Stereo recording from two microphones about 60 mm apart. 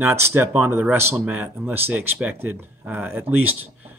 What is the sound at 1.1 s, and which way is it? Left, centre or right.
Speech, right.